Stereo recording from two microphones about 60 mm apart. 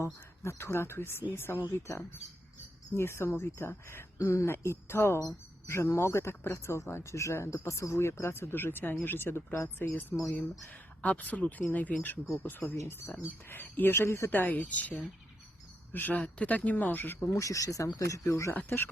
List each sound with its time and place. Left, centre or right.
0.0 s speech: left
1.6 s speech: left
4.2 s speech: left
4.4 s speech: left
10.1 s speech: centre; by 12.6 s left
12.6 s speech: left
13.2 s speech: left
14.3 s speech: left
16.1 s speech: left
17.2 s speech: left